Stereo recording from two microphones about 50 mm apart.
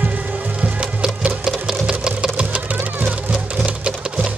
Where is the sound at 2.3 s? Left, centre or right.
Right.